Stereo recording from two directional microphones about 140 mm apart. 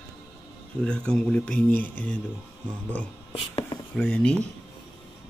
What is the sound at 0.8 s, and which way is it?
Speech, 5° left (ahead or behind).